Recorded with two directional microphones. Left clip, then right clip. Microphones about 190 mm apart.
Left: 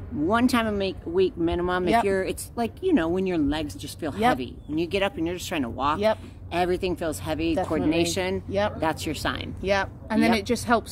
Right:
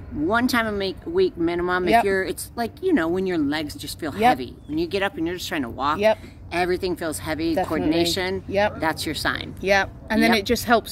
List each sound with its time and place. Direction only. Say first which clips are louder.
0.3 s speech: right 2 dB; 10° left (ahead or behind)
8.5 s speech: right 6 dB; 20° right (ahead or behind)
8.7 s speech: right 2 dB; 10° left (ahead or behind)
9.6 s speech: right 5 dB; 20° right (ahead or behind)